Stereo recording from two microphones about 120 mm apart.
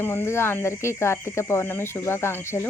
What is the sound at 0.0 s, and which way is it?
Speech, 20° left (ahead or behind).